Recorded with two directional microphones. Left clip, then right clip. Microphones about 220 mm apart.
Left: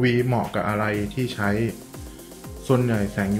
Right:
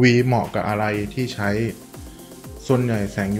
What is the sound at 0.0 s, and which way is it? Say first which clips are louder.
Speech: right 5 dB; 25° right (ahead or behind).